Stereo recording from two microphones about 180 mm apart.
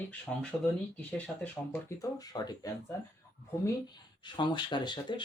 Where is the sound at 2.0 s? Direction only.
20° left (ahead or behind).